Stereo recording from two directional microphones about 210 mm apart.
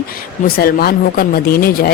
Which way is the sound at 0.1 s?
45° left (ahead or behind).